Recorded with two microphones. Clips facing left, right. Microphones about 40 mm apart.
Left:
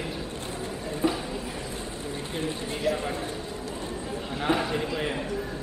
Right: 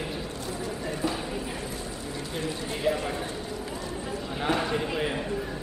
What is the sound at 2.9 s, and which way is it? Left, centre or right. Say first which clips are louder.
Speech: right 1 dB; right.